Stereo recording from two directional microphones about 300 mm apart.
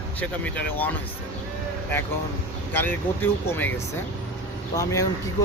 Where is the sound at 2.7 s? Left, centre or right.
Centre.